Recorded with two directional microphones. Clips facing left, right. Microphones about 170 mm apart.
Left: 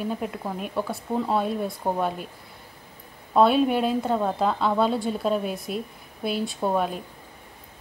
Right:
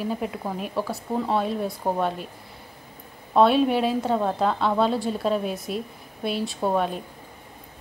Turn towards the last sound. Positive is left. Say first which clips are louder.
# right 1 dB
turn(degrees=0)  # may be behind; listen again after turning